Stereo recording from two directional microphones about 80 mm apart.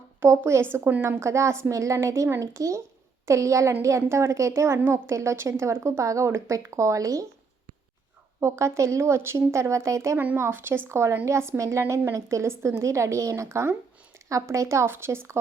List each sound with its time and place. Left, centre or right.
0.2 s a woman's voice: right
1.2 s a woman's voice: right
4.8 s a woman's voice: right
5.0 s a woman's voice: right
8.4 s a woman's voice: right